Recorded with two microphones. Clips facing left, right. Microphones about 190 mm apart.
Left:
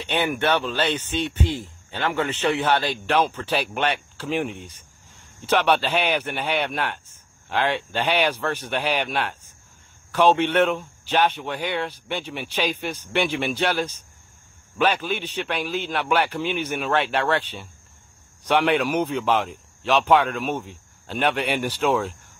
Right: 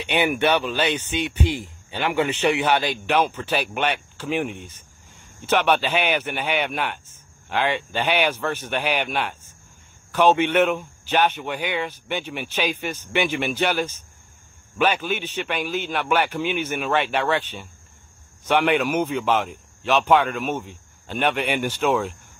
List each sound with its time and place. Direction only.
0.1 s speech: 10° right (ahead or behind)
1.4 s speech: 25° left (ahead or behind)
1.9 s speech: 15° right (ahead or behind)